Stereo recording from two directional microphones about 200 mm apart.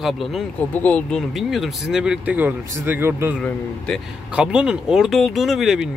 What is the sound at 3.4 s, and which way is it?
Speech, 5° left (ahead or behind).